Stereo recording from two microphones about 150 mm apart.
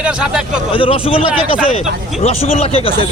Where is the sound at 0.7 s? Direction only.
40° left (ahead or behind).